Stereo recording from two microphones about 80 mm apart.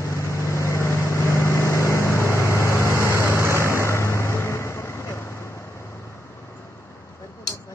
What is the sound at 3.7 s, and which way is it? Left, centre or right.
Vehicle, left.